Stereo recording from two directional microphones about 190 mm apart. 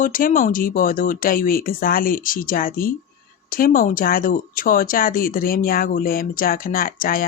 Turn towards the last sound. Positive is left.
turn(degrees=50)  # may be behind; listen again after turning